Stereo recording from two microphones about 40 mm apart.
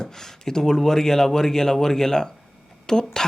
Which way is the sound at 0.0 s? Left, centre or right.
Centre.